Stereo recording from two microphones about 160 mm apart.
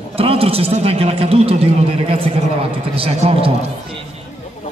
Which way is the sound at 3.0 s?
35° right (ahead or behind).